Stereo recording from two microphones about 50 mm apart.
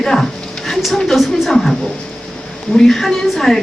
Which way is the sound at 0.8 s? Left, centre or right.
Centre.